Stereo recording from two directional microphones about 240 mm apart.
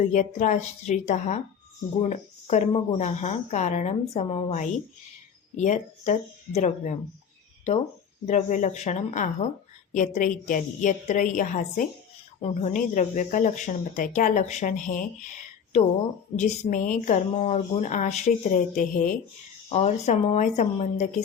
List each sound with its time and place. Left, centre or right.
0.1 s speech: left
8.3 s speech: left
16.3 s speech: left